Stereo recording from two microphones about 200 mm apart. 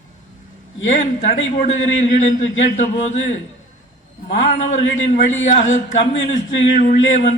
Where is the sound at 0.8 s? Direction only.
35° left (ahead or behind).